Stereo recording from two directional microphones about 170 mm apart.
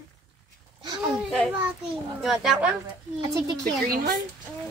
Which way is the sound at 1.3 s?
Centre (ahead or behind).